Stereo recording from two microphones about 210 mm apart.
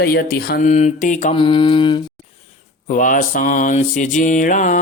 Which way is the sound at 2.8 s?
40° left (ahead or behind).